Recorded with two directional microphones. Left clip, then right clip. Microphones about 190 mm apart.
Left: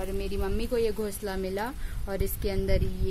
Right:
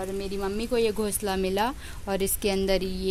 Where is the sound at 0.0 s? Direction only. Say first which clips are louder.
Right 2 dB; 15° right (ahead or behind).